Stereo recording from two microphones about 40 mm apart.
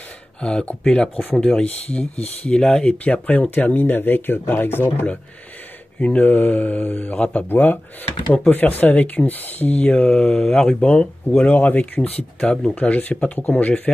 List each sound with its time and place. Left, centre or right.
0.4 s speech: left
1.6 s speech: left
2.5 s speech: left
2.9 s speech: left
3.8 s speech: left
5.9 s speech: left
7.5 s speech: left
9.8 s speech: left
11.2 s speech: left
12.4 s speech: left
12.7 s speech: left